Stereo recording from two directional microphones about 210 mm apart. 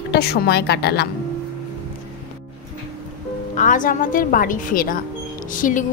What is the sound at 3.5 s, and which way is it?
A woman's voice, 40° left (ahead or behind).